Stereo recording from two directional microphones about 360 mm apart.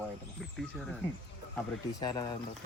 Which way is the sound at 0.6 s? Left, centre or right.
Centre.